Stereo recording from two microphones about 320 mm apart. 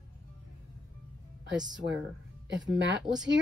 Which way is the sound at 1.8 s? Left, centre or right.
Right.